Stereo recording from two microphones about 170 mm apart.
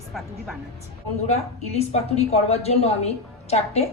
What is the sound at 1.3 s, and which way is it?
A woman's voice, 40° left (ahead or behind).